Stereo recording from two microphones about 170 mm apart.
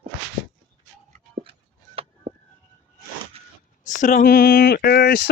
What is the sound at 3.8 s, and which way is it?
Speech, 50° left (ahead or behind).